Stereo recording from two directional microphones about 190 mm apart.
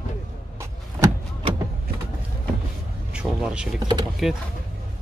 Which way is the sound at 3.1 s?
5° right (ahead or behind).